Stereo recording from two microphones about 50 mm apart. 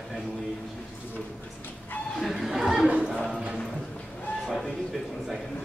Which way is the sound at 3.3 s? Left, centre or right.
Right.